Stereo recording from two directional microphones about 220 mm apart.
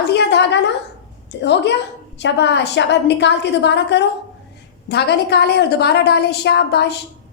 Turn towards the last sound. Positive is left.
turn(degrees=50)  # may be behind; listen again after turning